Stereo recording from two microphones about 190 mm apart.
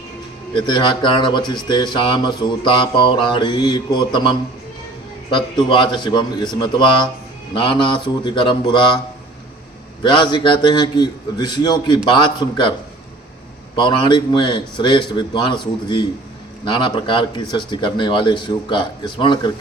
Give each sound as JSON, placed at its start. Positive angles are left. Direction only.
{"t": 0.5, "sound": "speech", "side_deg": 25}
{"t": 10.0, "sound": "speech", "side_deg": 25}
{"t": 13.7, "sound": "speech", "side_deg": 25}